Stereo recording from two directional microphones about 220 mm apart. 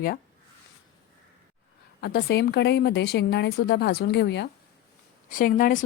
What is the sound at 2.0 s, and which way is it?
A woman's voice, 45° left (ahead or behind).